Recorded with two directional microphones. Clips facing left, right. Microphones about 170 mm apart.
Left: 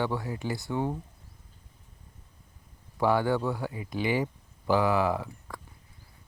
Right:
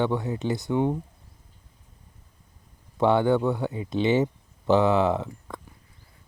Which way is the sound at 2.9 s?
25° right (ahead or behind).